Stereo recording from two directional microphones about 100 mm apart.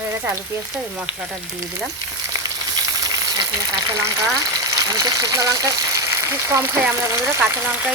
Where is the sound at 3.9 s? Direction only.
35° right (ahead or behind).